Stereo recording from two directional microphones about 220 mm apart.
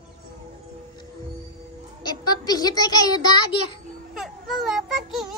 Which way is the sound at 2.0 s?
20° left (ahead or behind).